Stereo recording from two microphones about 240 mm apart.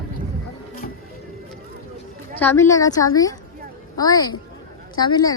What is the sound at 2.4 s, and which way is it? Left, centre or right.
A woman's voice, centre.